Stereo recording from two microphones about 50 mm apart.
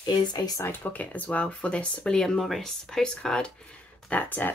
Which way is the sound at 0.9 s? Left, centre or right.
Left.